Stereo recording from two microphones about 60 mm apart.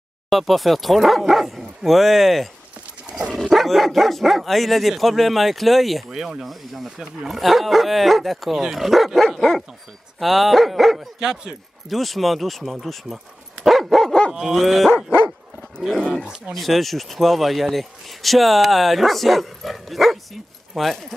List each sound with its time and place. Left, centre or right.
0.3 s speech: centre
3.1 s dog: centre
3.3 s speech: centre
11.1 s speech: centre
11.9 s speech: centre
12.8 s dog: centre
14.3 s speech: centre
16.5 s speech: centre